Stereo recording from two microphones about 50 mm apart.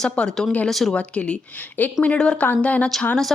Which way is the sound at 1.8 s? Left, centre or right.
Left.